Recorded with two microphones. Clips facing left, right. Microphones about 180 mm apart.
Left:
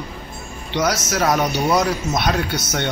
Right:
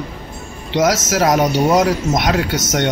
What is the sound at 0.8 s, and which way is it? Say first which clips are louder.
Speech: right 5 dB; 90° right.